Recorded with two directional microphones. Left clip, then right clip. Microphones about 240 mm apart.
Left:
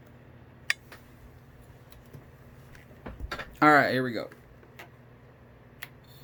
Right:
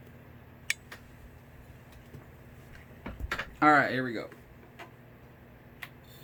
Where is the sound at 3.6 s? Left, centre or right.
Left.